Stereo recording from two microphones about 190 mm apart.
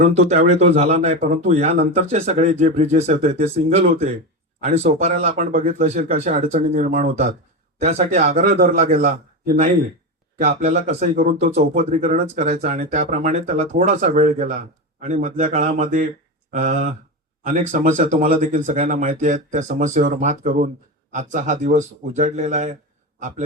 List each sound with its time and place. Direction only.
0.0 s speech: 35° right (ahead or behind)
8.7 s speech: 35° right (ahead or behind)
10.6 s speech: 35° right (ahead or behind)